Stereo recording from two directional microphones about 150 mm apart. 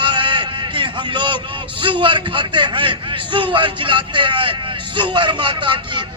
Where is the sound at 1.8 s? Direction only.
35° right (ahead or behind).